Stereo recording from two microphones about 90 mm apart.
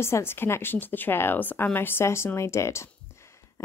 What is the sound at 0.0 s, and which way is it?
Speech, 30° left (ahead or behind).